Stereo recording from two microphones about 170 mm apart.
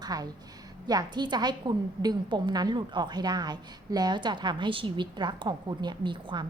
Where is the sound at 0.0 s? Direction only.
20° right (ahead or behind).